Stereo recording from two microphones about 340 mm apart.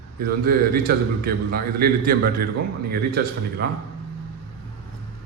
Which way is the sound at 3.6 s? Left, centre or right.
Right.